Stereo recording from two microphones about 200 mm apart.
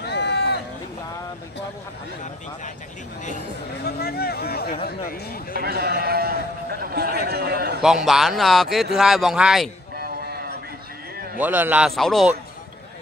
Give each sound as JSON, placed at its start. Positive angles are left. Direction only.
{"t": 0.0, "sound": "run", "side_deg": 55}
{"t": 3.8, "sound": "a sound", "side_deg": 50}
{"t": 5.5, "sound": "sheep", "side_deg": -50}
{"t": 7.8, "sound": "a man's voice", "side_deg": 0}
{"t": 9.9, "sound": "a sound", "side_deg": -50}
{"t": 11.3, "sound": "a man's voice", "side_deg": -10}